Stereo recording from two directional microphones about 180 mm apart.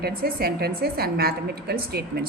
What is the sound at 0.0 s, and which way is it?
A woman's voice, 55° right (ahead or behind).